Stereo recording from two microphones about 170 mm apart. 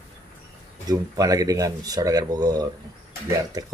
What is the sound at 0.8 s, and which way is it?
Speech, 20° right (ahead or behind).